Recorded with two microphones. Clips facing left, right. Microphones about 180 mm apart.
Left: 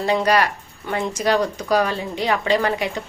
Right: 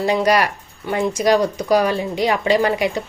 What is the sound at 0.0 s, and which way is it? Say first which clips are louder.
Speech: right 2 dB; 15° right (ahead or behind).